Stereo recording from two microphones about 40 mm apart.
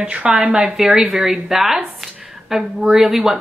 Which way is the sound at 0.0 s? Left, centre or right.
Right.